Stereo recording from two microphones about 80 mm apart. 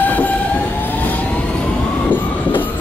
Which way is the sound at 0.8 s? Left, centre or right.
Left.